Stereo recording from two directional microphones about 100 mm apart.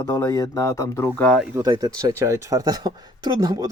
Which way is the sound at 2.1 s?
25° right (ahead or behind).